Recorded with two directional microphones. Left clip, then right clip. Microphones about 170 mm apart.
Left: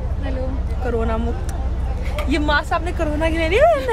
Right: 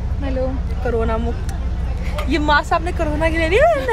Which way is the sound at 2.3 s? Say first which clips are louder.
Right 3 dB; 5° left (ahead or behind).